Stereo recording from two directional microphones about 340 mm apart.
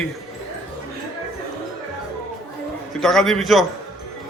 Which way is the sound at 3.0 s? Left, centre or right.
Centre.